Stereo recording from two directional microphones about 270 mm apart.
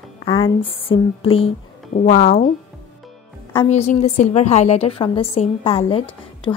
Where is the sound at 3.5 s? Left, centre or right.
Left.